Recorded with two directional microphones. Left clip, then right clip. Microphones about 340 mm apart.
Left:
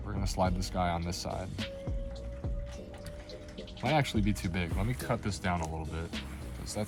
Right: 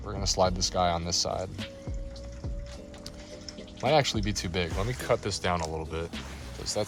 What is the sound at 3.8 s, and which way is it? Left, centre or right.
Speech, right.